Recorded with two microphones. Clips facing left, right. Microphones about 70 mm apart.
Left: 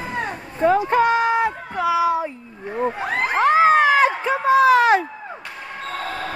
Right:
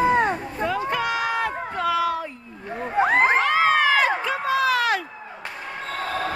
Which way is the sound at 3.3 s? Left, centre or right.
Left.